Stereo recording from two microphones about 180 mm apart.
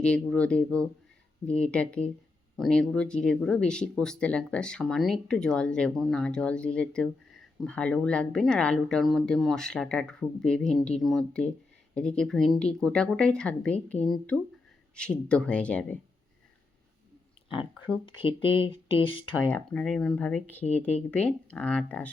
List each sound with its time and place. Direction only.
0.0 s speech: 5° left (ahead or behind)
18.0 s speech: 30° left (ahead or behind)
19.5 s speech: 10° left (ahead or behind)